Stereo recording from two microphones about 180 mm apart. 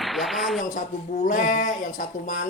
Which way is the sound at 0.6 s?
45° left (ahead or behind).